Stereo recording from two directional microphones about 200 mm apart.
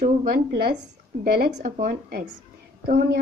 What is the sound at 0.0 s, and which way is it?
A woman's voice, 45° right (ahead or behind).